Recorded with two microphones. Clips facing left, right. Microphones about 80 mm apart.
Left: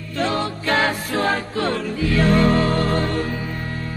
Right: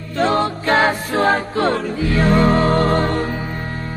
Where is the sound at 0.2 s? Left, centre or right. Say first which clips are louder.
Right 5 dB; right.